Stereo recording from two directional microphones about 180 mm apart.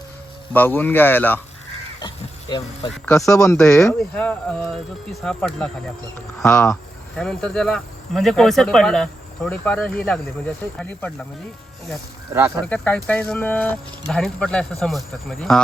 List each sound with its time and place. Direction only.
0.5 s speech: 10° left (ahead or behind)
2.0 s speech: 25° left (ahead or behind)
3.6 s speech: 5° left (ahead or behind)
12.3 s speech: 10° right (ahead or behind)
12.6 s speech: 10° left (ahead or behind)